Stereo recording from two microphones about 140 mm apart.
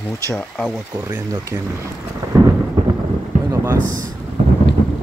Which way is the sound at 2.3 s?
25° right (ahead or behind).